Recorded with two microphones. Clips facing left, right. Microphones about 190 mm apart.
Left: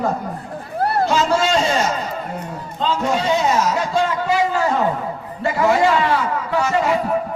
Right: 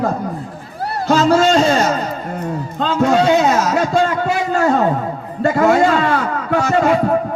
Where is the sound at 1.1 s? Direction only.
45° right (ahead or behind).